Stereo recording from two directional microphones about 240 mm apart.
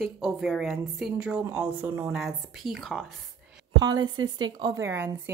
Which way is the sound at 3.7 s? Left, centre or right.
Centre.